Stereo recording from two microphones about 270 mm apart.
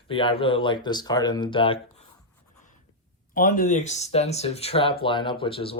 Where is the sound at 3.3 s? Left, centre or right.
Left.